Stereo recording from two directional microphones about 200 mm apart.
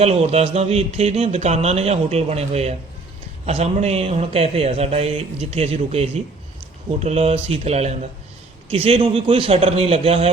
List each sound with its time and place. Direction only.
0.0 s a man's voice: 30° right (ahead or behind)